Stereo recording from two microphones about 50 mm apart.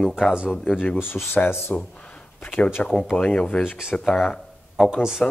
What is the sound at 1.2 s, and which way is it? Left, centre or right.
Speech, left.